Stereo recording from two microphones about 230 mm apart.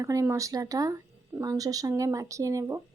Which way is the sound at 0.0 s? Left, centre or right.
Centre.